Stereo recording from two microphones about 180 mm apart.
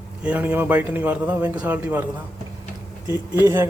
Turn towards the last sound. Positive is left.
turn(degrees=-15)  # may be behind; listen again after turning